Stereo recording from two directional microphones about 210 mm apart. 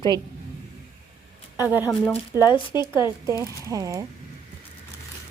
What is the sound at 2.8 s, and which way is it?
Speech, 20° left (ahead or behind).